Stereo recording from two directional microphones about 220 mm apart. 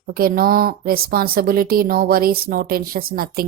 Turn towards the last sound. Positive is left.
turn(degrees=-45)  # may be behind; listen again after turning